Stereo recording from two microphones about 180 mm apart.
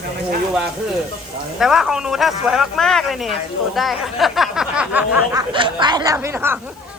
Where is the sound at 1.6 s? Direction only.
Centre (ahead or behind).